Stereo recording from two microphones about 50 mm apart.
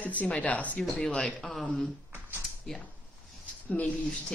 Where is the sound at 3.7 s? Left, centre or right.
Left.